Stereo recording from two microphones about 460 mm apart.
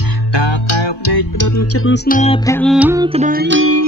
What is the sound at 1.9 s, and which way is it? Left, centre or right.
Music, centre.